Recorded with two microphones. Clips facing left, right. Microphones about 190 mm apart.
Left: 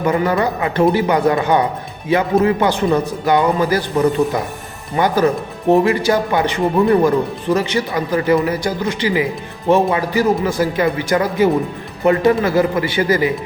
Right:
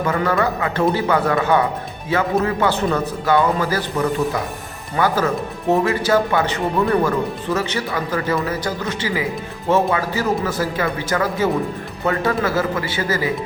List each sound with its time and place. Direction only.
0.0 s a man's voice: 15° left (ahead or behind)